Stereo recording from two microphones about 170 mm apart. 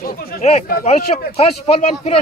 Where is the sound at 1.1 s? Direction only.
35° left (ahead or behind).